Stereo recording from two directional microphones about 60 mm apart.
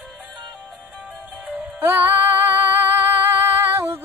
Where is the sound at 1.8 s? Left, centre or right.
Right.